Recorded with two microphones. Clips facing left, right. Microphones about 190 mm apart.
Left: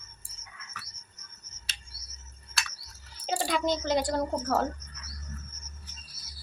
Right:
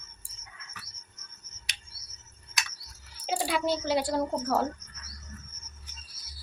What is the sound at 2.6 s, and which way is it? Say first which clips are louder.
Typing: even; 20° right (ahead or behind).